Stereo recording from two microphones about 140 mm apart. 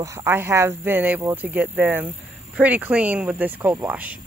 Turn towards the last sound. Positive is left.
turn(degrees=-10)  # may be behind; listen again after turning